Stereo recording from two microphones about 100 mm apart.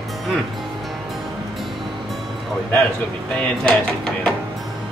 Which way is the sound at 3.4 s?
10° left (ahead or behind).